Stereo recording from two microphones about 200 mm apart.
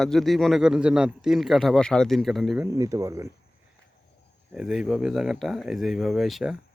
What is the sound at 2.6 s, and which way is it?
Speech, 15° right (ahead or behind).